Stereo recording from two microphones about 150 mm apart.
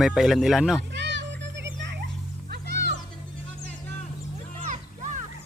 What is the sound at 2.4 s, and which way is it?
Music, 90° right.